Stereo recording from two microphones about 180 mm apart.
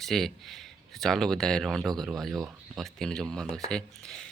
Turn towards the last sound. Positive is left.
turn(degrees=5)  # may be behind; listen again after turning